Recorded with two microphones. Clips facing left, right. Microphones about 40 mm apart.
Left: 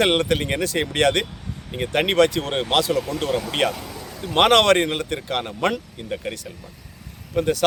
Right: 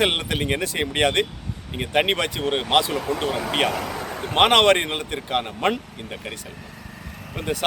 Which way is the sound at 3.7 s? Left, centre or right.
Right.